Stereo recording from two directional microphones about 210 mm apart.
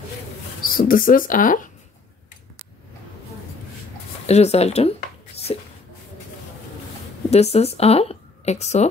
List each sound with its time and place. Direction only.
0.6 s speech: 40° left (ahead or behind)
4.3 s speech: 30° left (ahead or behind)
5.5 s a sound: 25° left (ahead or behind)
7.2 s a woman's voice: 30° left (ahead or behind)